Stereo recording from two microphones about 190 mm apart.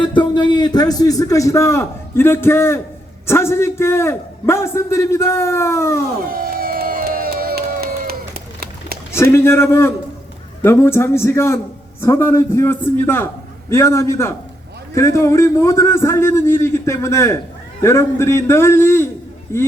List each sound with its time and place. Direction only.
0.0 s a man's voice: 25° left (ahead or behind)
6.3 s crowd: 50° right (ahead or behind)
9.3 s a man's voice: 15° left (ahead or behind)